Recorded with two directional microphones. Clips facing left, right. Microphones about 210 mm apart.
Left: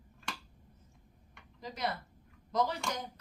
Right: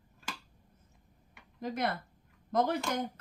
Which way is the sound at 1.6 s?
55° right (ahead or behind).